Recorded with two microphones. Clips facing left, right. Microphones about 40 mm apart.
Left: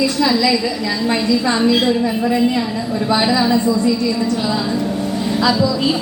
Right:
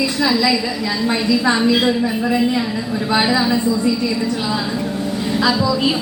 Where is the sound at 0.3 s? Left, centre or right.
Centre.